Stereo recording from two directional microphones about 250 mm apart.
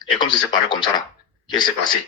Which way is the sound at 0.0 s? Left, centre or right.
Centre.